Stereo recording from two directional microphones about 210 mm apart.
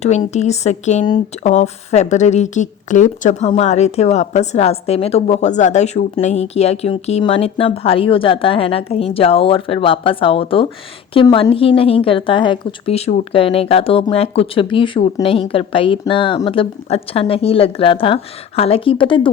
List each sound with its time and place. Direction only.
0.0 s speech: 30° left (ahead or behind)